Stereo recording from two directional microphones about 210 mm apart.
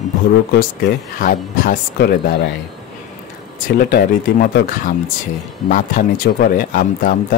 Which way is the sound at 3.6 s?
40° left (ahead or behind).